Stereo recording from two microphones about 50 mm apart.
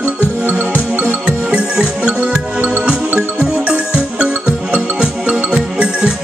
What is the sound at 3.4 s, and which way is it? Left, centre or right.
Music, right.